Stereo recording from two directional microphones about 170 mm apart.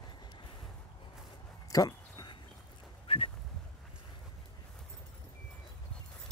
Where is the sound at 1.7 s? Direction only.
25° left (ahead or behind).